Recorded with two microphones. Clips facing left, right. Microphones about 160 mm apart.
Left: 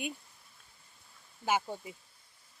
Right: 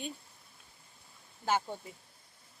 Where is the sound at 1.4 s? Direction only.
10° left (ahead or behind).